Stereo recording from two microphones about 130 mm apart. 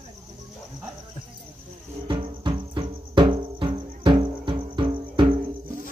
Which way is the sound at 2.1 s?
40° right (ahead or behind).